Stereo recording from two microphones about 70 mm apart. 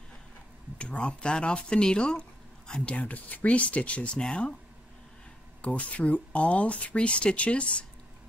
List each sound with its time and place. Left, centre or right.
0.7 s speech: centre
5.6 s speech: centre